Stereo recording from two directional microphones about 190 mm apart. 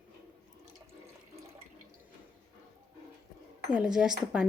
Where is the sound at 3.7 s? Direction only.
5° right (ahead or behind).